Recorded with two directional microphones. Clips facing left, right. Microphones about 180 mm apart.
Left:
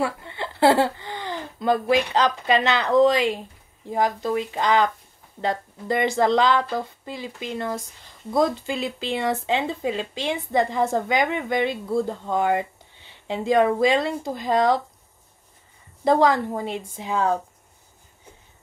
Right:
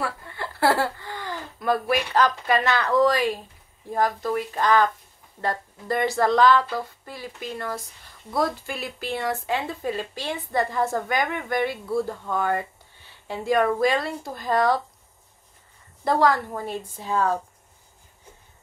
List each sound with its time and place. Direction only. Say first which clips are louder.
0.0 s speech: left 4 dB; 20° left (ahead or behind)
16.0 s speech: left 3 dB; 20° left (ahead or behind)